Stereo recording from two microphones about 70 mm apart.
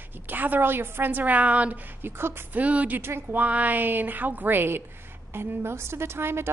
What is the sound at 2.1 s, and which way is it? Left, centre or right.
Speech, right.